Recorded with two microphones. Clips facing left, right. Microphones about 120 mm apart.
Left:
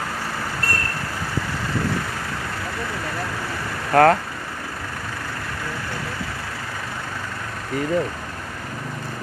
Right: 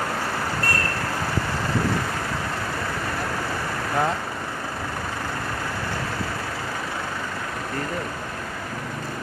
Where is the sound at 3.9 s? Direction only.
60° left (ahead or behind).